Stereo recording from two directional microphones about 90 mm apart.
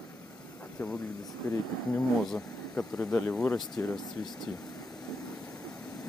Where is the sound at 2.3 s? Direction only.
10° left (ahead or behind).